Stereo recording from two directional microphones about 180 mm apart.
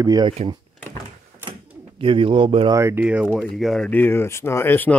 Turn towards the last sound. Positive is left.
turn(degrees=10)  # may be behind; listen again after turning